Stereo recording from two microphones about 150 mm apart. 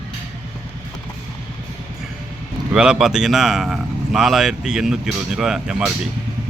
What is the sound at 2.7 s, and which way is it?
A man's voice, 5° right (ahead or behind).